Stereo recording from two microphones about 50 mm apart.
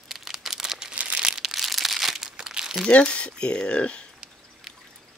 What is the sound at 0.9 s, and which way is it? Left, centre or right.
Crumpling, right.